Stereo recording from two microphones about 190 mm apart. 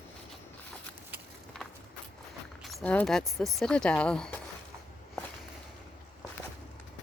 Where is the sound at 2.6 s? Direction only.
5° left (ahead or behind).